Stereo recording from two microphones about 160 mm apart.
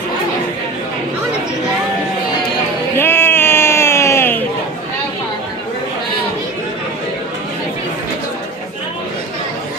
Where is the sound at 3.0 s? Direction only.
15° left (ahead or behind).